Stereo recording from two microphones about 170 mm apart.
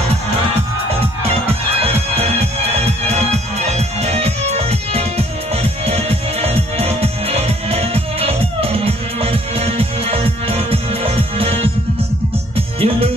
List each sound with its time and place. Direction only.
1.8 s music: 35° right (ahead or behind)
3.5 s music: 40° right (ahead or behind)
12.5 s music: 35° right (ahead or behind)